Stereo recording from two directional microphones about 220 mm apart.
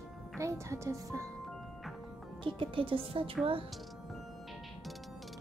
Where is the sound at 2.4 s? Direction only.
25° right (ahead or behind).